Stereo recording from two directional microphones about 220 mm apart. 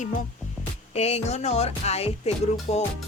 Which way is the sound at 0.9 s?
30° left (ahead or behind).